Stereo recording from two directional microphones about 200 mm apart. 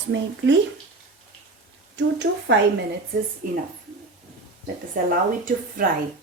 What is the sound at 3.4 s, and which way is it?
Speech, 45° right (ahead or behind).